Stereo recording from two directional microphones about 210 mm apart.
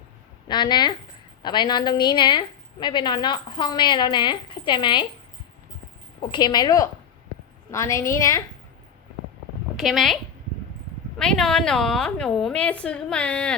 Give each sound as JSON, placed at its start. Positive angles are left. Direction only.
{"t": 0.4, "sound": "a woman's voice", "side_deg": 20}
{"t": 6.3, "sound": "a woman's voice", "side_deg": 20}
{"t": 9.7, "sound": "speech", "side_deg": 0}
{"t": 11.2, "sound": "a woman's voice", "side_deg": 5}